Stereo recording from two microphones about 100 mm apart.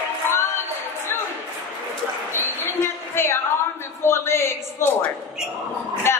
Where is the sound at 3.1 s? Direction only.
25° left (ahead or behind).